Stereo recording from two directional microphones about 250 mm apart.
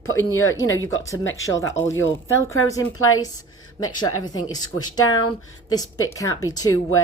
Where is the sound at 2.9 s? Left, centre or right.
Left.